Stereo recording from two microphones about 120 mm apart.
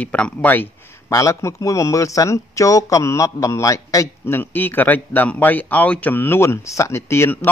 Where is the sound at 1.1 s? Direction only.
25° left (ahead or behind).